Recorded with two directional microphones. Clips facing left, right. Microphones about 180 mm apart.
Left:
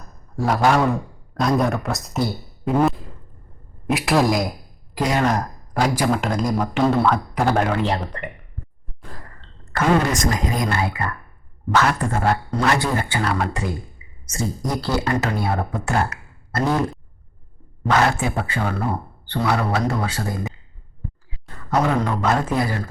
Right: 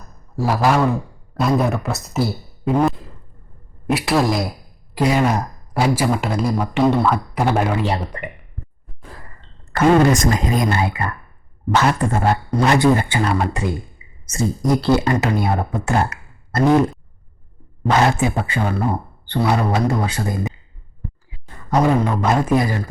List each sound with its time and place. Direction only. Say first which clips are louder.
0.3 s speech: right 1 dB; 5° right (ahead or behind)
9.0 s sigh: even; 5° right (ahead or behind)
9.4 s speech: right 6 dB; 25° right (ahead or behind)
17.8 s speech: right 2 dB; 20° right (ahead or behind)